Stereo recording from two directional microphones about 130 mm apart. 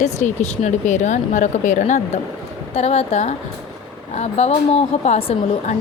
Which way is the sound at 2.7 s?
55° left (ahead or behind).